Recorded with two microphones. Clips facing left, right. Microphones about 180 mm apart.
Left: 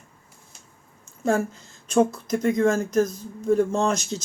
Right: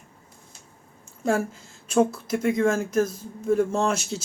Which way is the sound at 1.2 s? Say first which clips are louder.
Left 1 dB; 5° right (ahead or behind).